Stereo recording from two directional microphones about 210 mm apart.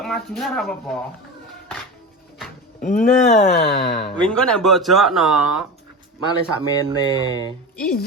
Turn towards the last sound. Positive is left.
turn(degrees=5)  # may be behind; listen again after turning